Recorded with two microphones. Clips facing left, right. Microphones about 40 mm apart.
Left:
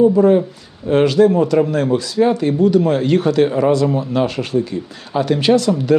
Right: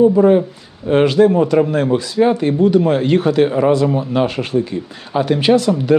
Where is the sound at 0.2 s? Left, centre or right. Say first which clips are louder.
Right 1 dB; right.